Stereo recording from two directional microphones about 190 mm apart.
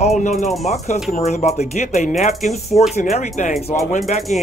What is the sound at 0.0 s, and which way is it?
Speech, 35° left (ahead or behind).